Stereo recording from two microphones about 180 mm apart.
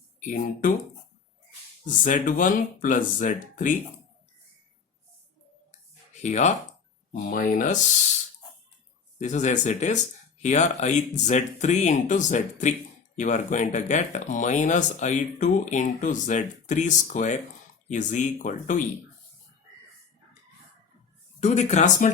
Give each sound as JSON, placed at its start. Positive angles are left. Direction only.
{"t": 0.2, "sound": "speech", "side_deg": 45}
{"t": 2.0, "sound": "speech", "side_deg": 45}
{"t": 6.2, "sound": "speech", "side_deg": 40}
{"t": 9.1, "sound": "speech", "side_deg": 40}
{"t": 21.4, "sound": "speech", "side_deg": 40}